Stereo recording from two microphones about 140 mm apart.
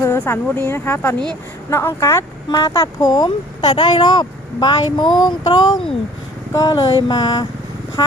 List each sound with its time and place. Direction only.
0.0 s speech: 15° left (ahead or behind)